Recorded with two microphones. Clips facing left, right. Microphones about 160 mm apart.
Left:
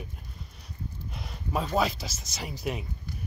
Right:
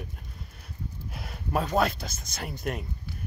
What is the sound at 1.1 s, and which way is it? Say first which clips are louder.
Speech: right 2 dB; 5° right (ahead or behind).